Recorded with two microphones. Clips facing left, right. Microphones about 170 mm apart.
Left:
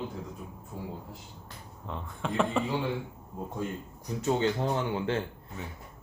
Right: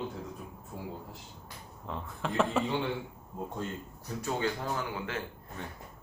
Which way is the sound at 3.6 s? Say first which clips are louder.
Left 5 dB; 10° left (ahead or behind).